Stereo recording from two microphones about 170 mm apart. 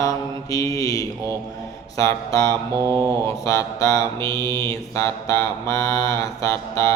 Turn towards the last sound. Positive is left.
turn(degrees=15)  # may be behind; listen again after turning